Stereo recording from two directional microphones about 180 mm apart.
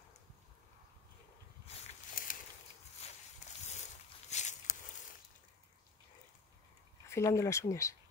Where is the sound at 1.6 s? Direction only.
35° left (ahead or behind).